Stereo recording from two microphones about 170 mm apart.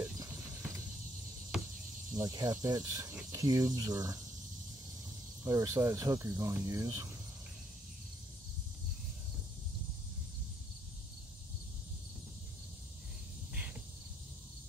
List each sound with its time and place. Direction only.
1.5 s cricket: 5° right (ahead or behind)
2.1 s speech: 20° right (ahead or behind)
5.4 s speech: 20° right (ahead or behind)